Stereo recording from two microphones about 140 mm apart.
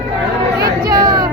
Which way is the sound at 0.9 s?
30° right (ahead or behind).